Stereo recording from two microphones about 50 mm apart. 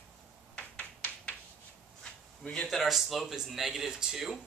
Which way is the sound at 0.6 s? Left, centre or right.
Left.